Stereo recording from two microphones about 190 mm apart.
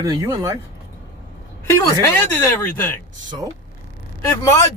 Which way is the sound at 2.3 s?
10° left (ahead or behind).